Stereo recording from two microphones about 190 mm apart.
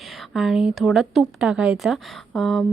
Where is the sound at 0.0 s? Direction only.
Centre (ahead or behind).